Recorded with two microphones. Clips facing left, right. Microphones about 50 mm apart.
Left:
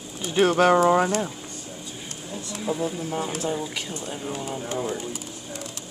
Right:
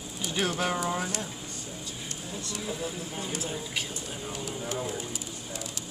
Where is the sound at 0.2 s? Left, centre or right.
Left.